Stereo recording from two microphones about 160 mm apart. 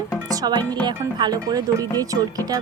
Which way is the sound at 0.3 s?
25° right (ahead or behind).